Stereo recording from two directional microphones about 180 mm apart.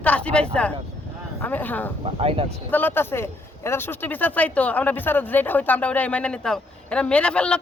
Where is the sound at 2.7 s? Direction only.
10° left (ahead or behind).